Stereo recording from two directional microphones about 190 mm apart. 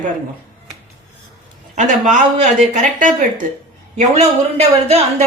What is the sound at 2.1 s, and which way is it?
A woman's voice, 35° right (ahead or behind).